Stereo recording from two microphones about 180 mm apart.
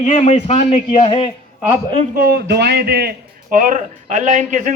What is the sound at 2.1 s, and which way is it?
A man's voice, 55° right (ahead or behind).